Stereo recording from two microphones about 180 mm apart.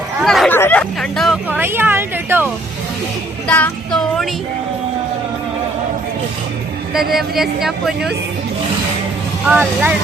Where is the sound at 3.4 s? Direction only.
5° left (ahead or behind).